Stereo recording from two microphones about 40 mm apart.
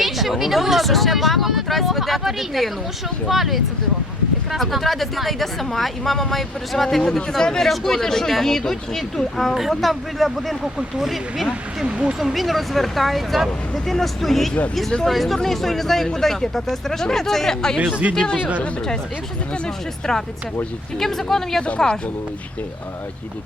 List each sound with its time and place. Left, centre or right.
0.0 s speech: centre
10.8 s speech: centre
11.9 s speech: right
12.2 s speech: centre
18.0 s speech: right
19.6 s speech: centre